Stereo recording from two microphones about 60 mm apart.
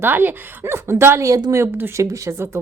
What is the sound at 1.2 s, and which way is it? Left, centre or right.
Speech, right.